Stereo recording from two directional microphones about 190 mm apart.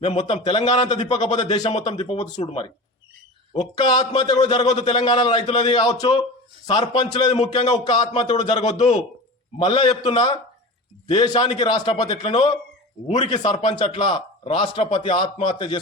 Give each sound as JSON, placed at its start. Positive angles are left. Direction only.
{"t": 0.0, "sound": "speech", "side_deg": 35}
{"t": 0.7, "sound": "a man's voice", "side_deg": 25}
{"t": 3.5, "sound": "a man's voice", "side_deg": 25}